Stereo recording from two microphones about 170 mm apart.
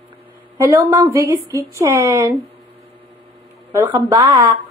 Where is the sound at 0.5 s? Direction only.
20° right (ahead or behind).